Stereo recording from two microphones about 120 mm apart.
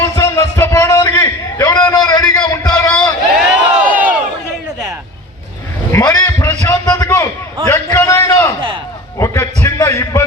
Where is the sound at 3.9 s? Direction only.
10° right (ahead or behind).